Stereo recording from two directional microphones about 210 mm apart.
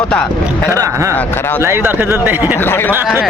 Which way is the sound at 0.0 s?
5° left (ahead or behind).